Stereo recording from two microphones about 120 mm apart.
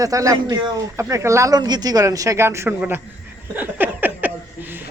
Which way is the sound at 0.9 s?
25° right (ahead or behind).